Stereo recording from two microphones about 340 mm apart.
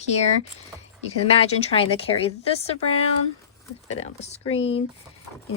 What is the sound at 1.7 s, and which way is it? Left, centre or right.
A woman's voice, centre.